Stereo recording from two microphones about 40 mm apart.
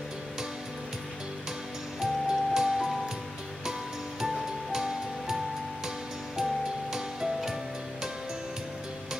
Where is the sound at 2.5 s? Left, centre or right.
Centre.